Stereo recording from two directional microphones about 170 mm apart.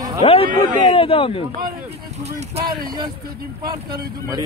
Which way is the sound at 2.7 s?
60° right (ahead or behind).